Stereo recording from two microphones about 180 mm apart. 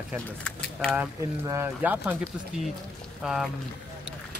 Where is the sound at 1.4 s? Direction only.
10° right (ahead or behind).